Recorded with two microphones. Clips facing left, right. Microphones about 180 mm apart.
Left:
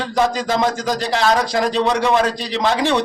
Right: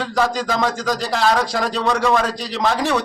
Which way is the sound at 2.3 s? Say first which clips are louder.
Left 2 dB; centre (ahead or behind).